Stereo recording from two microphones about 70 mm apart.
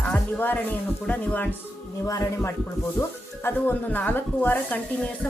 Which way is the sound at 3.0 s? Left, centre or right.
Left.